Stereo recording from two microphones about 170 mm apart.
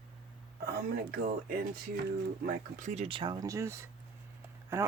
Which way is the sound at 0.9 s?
70° right (ahead or behind).